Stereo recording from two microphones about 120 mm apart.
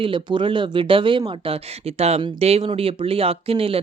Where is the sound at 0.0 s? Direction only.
45° right (ahead or behind).